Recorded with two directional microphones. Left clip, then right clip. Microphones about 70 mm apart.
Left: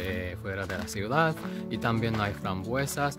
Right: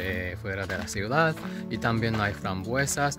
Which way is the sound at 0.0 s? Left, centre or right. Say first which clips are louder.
Right 2 dB; left.